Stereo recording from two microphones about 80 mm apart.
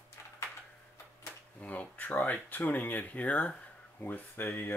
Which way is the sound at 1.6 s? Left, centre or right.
Centre.